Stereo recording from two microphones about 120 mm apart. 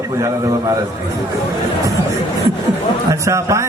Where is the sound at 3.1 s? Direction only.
25° right (ahead or behind).